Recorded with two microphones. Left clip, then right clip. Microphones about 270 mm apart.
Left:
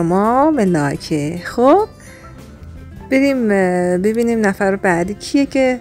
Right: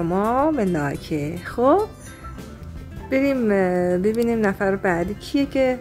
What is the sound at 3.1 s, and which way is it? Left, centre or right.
Speech, left.